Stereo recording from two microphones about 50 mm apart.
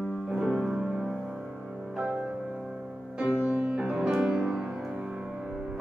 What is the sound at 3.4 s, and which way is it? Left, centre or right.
Music, right.